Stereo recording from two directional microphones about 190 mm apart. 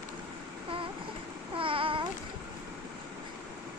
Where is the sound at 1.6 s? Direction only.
25° right (ahead or behind).